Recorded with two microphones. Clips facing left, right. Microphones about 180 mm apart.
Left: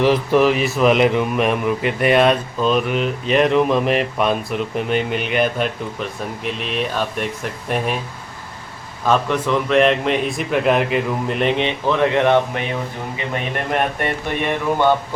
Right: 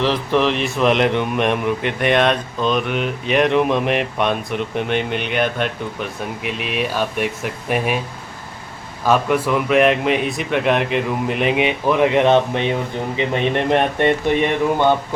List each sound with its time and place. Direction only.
0.0 s speech: 10° left (ahead or behind)
9.0 s speech: 10° right (ahead or behind); by 14.1 s 25° right (ahead or behind)